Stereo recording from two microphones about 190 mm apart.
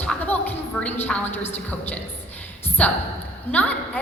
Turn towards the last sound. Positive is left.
turn(degrees=10)  # may be behind; listen again after turning